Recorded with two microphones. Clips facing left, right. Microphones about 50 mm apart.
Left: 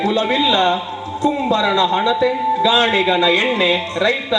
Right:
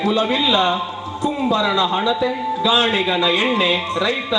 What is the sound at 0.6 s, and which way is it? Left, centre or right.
A man's voice, centre.